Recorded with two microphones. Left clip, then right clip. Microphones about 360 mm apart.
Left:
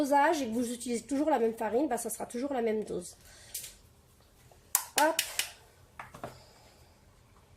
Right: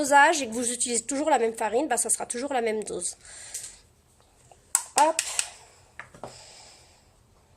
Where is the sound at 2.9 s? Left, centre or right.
Right.